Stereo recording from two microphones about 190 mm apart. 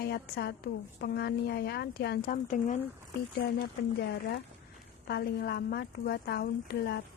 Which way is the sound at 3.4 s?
65° left (ahead or behind).